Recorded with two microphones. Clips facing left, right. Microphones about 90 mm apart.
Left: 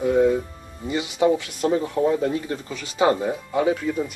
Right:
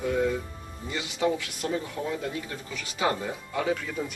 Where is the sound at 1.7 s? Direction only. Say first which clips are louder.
Left 10 dB; 40° left (ahead or behind).